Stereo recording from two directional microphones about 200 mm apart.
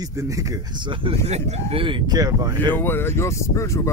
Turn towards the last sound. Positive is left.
turn(degrees=15)  # may be behind; listen again after turning